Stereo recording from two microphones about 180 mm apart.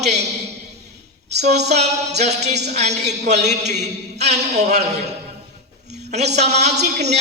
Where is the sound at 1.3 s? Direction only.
40° right (ahead or behind).